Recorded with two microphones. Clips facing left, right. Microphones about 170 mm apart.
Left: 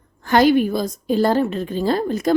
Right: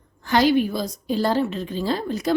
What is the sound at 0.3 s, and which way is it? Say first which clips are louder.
A woman's voice: left 4 dB; 50° left (ahead or behind).